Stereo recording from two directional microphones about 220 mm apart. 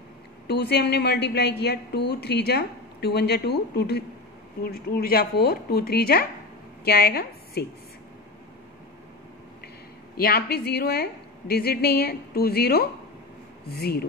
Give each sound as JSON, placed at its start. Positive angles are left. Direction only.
{"t": 0.5, "sound": "a woman's voice", "side_deg": 50}
{"t": 10.1, "sound": "a woman's voice", "side_deg": 45}